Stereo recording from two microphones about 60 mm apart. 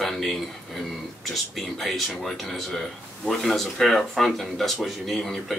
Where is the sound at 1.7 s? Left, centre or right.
Centre.